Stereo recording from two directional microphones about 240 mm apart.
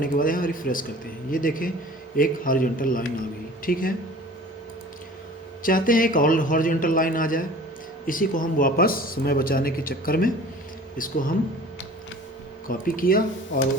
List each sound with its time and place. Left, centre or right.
0.0 s speech: left
5.6 s speech: left
12.6 s speech: left